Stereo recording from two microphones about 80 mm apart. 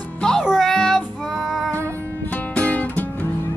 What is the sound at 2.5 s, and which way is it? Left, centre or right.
Music, centre.